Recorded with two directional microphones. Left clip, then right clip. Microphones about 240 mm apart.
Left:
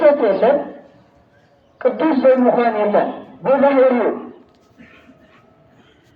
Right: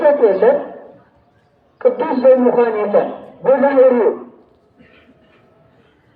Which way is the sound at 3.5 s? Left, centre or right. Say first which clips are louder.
Right 2 dB; right.